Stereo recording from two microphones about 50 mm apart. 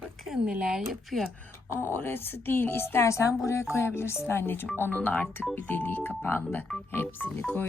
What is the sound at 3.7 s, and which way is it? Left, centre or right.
Speech, left.